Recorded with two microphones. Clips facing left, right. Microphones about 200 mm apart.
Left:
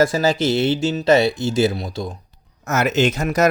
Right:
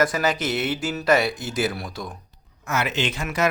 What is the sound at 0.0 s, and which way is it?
Speech, 25° left (ahead or behind).